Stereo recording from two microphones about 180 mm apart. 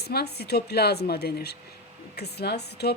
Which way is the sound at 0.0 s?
60° left (ahead or behind).